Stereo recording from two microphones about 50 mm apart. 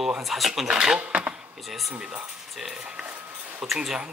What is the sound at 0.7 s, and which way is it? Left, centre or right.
Speech, centre.